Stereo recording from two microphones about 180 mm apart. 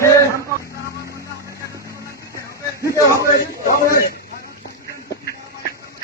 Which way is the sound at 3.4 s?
55° left (ahead or behind).